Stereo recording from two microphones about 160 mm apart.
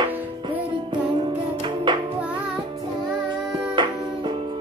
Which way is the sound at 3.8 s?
30° right (ahead or behind).